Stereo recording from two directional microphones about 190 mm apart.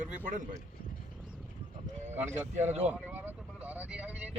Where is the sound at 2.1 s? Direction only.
35° right (ahead or behind).